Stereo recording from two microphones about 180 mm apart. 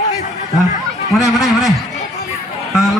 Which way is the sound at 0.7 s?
40° left (ahead or behind).